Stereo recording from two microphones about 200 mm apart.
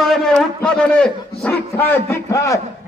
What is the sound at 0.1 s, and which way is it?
A man's voice, 5° left (ahead or behind).